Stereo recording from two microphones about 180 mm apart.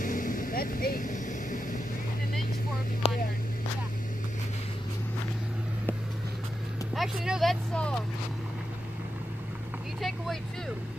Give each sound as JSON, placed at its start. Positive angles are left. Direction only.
{"t": 0.0, "sound": "vehicle", "side_deg": 50}
{"t": 3.0, "sound": "vehicle", "side_deg": 35}
{"t": 7.0, "sound": "speech", "side_deg": 0}